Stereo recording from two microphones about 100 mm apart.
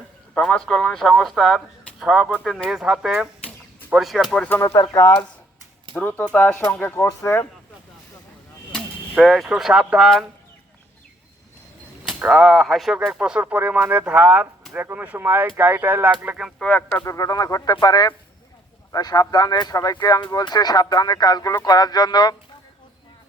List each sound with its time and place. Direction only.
0.3 s speech: 5° left (ahead or behind)
4.4 s speech: 20° left (ahead or behind)
5.9 s speech: 10° left (ahead or behind)
6.9 s speech: 30° left (ahead or behind)
9.2 s speech: centre (ahead or behind)
12.0 s speech: 5° right (ahead or behind)
16.6 s speech: 15° left (ahead or behind)
17.1 s speech: 35° left (ahead or behind)